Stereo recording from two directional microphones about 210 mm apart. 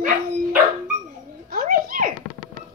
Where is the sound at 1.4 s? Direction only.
45° right (ahead or behind).